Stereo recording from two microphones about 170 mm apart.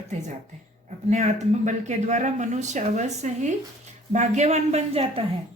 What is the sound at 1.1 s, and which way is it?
Speech, 40° right (ahead or behind).